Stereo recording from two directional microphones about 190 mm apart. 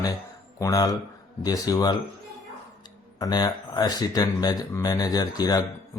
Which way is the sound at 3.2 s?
20° left (ahead or behind).